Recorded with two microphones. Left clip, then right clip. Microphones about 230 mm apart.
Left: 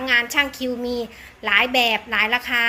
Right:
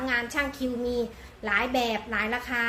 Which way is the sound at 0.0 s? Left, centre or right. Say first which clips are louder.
Left 9 dB; left.